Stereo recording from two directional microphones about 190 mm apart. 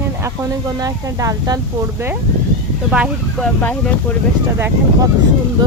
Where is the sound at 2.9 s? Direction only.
5° right (ahead or behind).